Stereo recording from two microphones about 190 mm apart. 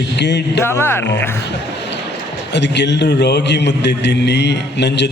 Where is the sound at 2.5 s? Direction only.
65° left (ahead or behind).